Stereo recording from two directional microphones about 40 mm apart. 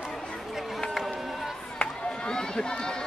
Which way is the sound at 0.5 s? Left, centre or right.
Centre.